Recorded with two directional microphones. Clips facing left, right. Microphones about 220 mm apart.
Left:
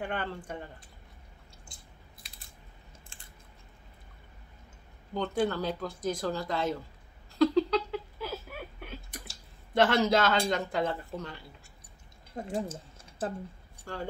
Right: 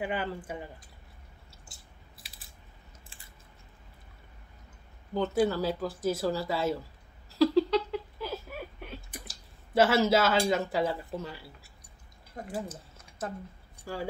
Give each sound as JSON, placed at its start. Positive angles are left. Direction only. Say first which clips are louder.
{"t": 0.0, "sound": "speech", "louder": "right 2 dB", "side_deg": -5}
{"t": 5.1, "sound": "speech", "louder": "right 3 dB", "side_deg": -5}
{"t": 7.3, "sound": "a sound", "louder": "right 1 dB", "side_deg": -5}
{"t": 9.8, "sound": "speech", "louder": "right 1 dB", "side_deg": -5}
{"t": 12.6, "sound": "a sound", "louder": "left 2 dB", "side_deg": 30}
{"t": 13.9, "sound": "speech", "louder": "right 2 dB", "side_deg": -10}